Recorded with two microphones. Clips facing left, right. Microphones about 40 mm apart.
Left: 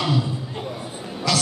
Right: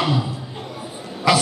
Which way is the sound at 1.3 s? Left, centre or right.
Centre.